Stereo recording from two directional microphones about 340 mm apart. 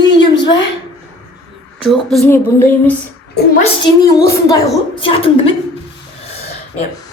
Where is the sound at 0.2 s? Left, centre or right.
Centre.